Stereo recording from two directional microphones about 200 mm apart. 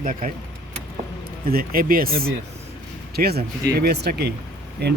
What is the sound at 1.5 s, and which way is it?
Speech, 45° right (ahead or behind).